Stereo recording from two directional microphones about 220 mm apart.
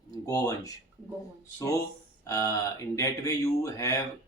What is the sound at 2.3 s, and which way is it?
Speech, 15° left (ahead or behind).